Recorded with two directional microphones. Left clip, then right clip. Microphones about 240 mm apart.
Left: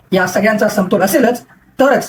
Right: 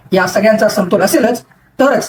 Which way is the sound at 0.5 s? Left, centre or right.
Centre.